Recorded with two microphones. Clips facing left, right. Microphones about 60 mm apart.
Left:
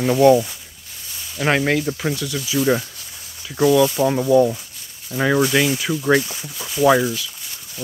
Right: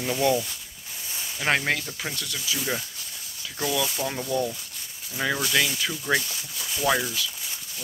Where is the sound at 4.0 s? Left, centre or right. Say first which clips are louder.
Left 12 dB; left.